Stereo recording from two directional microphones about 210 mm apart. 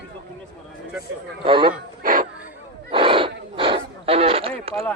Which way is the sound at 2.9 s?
25° right (ahead or behind).